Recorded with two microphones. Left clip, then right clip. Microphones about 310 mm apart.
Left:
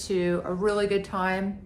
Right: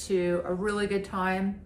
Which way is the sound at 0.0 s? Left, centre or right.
Centre.